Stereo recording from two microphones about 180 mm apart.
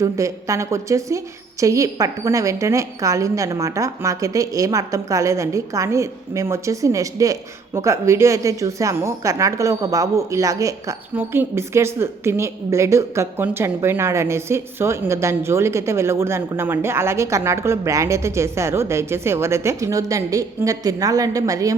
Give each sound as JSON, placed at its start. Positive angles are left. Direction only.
{"t": 0.0, "sound": "a woman's voice", "side_deg": -15}